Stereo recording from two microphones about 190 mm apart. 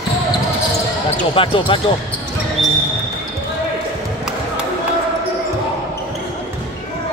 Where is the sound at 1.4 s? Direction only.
25° left (ahead or behind).